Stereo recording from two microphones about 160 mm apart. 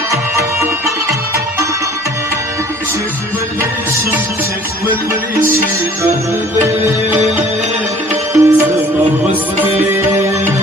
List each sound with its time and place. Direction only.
0.1 s music: 20° right (ahead or behind)
8.3 s music: 20° right (ahead or behind)
9.8 s music: 15° right (ahead or behind)